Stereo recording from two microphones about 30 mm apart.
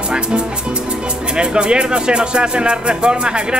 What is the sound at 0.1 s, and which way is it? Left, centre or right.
Speech, right.